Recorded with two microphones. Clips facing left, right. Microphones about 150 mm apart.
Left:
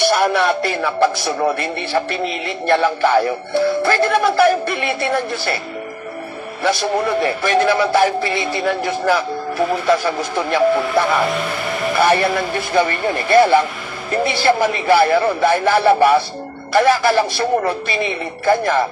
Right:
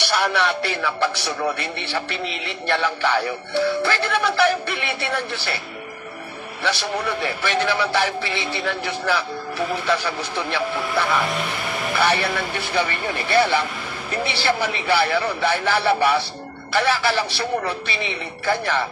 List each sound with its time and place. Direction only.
0.0 s speech: 45° left (ahead or behind)
6.6 s speech: 45° left (ahead or behind)